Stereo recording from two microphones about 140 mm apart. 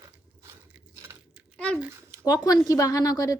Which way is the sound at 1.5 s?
5° left (ahead or behind).